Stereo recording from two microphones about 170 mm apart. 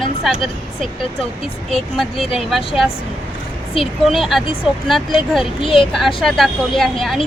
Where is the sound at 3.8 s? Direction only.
30° left (ahead or behind).